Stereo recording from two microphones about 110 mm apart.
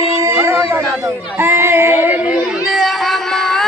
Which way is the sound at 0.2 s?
25° right (ahead or behind).